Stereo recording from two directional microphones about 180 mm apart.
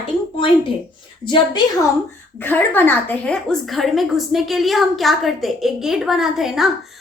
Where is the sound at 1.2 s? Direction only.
25° left (ahead or behind).